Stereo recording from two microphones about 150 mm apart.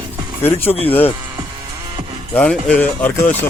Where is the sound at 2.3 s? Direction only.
5° left (ahead or behind).